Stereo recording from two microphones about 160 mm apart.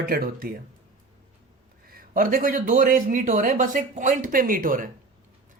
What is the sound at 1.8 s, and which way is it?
A man's voice, 65° right (ahead or behind).